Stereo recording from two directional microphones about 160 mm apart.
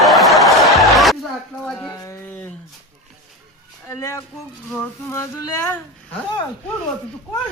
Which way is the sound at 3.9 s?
15° left (ahead or behind).